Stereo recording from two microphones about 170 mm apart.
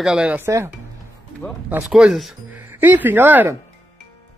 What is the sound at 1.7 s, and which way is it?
Speech, 10° right (ahead or behind).